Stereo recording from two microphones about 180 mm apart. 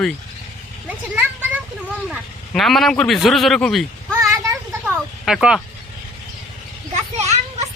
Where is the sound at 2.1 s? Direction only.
Centre (ahead or behind).